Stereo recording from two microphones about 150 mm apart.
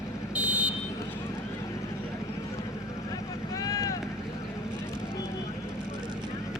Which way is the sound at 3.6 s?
25° left (ahead or behind).